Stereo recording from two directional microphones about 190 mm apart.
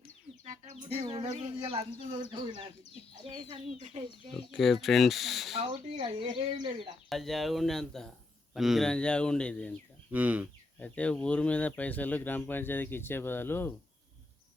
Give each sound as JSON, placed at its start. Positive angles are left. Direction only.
{"t": 0.4, "sound": "speech", "side_deg": -40}
{"t": 4.4, "sound": "speech", "side_deg": 0}
{"t": 5.5, "sound": "speech", "side_deg": -30}
{"t": 7.1, "sound": "speech", "side_deg": 0}
{"t": 10.1, "sound": "speech", "side_deg": -10}
{"t": 10.8, "sound": "speech", "side_deg": 5}